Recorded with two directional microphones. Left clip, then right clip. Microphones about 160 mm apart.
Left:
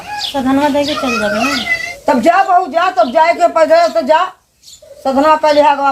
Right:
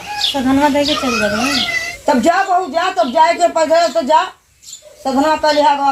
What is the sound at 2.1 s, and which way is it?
Speech, 15° right (ahead or behind).